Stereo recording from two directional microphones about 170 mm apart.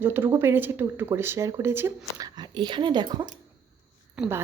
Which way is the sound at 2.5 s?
25° right (ahead or behind).